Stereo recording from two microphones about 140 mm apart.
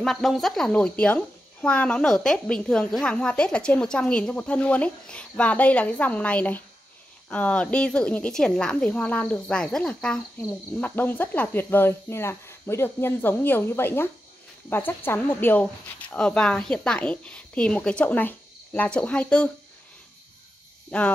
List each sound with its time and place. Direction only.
0.0 s a woman's voice: centre (ahead or behind)
20.9 s a woman's voice: 10° left (ahead or behind)